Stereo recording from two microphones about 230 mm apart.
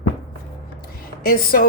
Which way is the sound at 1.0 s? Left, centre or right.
Left.